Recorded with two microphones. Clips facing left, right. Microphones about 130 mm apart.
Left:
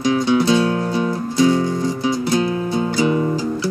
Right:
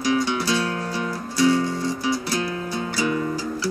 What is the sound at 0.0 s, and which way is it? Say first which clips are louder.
Music: left 6 dB; 25° left (ahead or behind).